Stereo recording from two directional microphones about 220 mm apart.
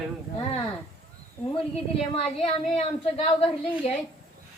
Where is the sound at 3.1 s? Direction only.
25° left (ahead or behind).